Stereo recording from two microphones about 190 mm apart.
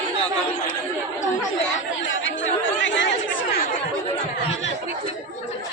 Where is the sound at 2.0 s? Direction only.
80° left.